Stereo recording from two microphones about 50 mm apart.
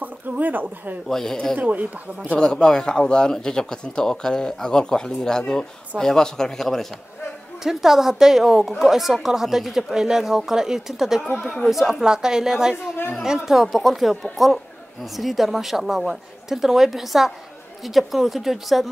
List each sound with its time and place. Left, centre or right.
0.0 s speech: right
1.0 s speech: centre
1.6 s speech: right
2.3 s speech: centre
7.6 s a woman's voice: centre